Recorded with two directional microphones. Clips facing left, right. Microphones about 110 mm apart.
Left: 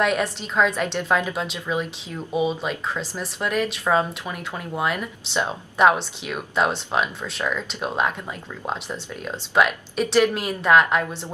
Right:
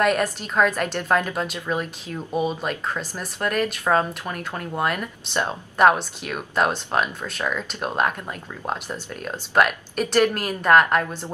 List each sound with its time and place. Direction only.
0.0 s speech: centre (ahead or behind)